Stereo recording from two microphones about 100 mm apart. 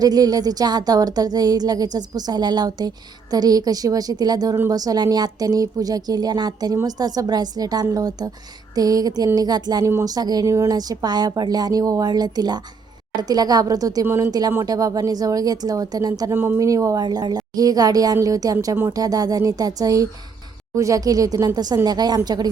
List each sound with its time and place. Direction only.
0.0 s a woman's voice: 40° right (ahead or behind)
14.0 s speech: 25° right (ahead or behind)
14.3 s a woman's voice: 40° right (ahead or behind)
16.3 s speech: 25° right (ahead or behind)
16.6 s a woman's voice: 35° right (ahead or behind)